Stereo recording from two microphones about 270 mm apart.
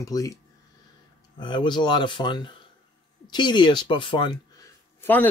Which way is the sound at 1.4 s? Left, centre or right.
Centre.